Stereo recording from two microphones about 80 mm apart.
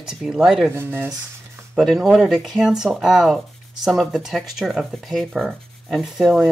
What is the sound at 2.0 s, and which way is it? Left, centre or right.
Speech, centre.